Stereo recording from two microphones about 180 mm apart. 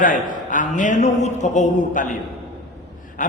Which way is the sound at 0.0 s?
45° left (ahead or behind).